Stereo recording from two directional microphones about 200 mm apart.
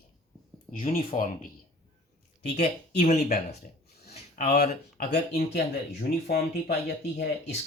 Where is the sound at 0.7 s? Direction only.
45° left (ahead or behind).